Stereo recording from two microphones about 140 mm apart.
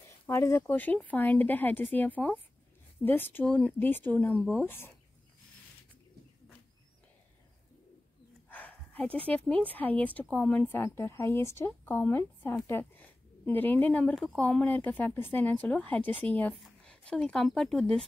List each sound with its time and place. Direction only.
0.3 s speech: 20° left (ahead or behind)
8.5 s a sound: 10° left (ahead or behind)
9.5 s speech: 10° left (ahead or behind)